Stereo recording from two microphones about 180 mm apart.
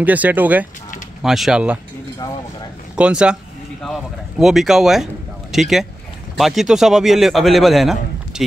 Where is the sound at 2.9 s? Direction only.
5° right (ahead or behind).